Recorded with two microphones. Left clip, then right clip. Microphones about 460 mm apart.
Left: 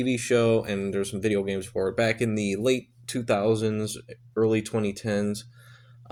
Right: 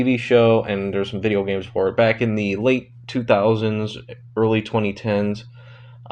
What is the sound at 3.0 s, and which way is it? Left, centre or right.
Speech, left.